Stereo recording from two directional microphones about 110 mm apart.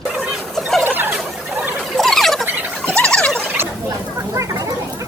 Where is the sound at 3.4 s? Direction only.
20° right (ahead or behind).